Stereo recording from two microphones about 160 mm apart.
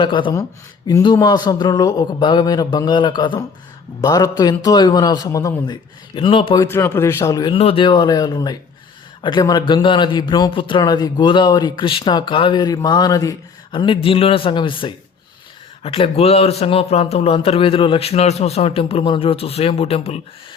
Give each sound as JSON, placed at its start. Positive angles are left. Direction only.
{"t": 0.0, "sound": "a man's voice", "side_deg": 30}
{"t": 6.6, "sound": "a man's voice", "side_deg": 15}